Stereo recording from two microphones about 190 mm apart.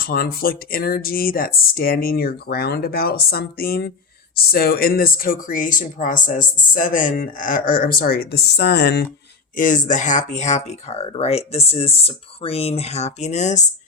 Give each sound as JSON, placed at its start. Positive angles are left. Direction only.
{"t": 0.0, "sound": "speech", "side_deg": 50}
{"t": 9.6, "sound": "speech", "side_deg": 45}